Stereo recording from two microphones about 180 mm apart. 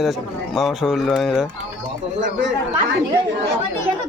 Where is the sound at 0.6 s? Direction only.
Centre (ahead or behind).